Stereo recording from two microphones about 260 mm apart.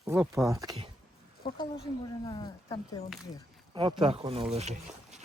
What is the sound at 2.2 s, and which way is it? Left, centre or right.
Speech, centre.